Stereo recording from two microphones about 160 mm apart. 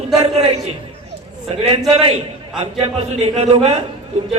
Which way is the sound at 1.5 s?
40° right (ahead or behind).